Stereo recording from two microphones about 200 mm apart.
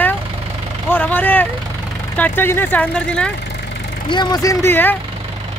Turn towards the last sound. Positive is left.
turn(degrees=10)  # may be behind; listen again after turning